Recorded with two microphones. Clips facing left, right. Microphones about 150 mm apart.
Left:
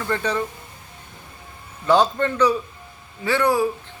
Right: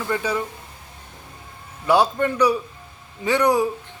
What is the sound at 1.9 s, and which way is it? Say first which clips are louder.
Speech: even; 10° right (ahead or behind).